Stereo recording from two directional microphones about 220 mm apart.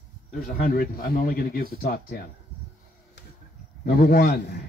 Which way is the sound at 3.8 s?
45° left (ahead or behind).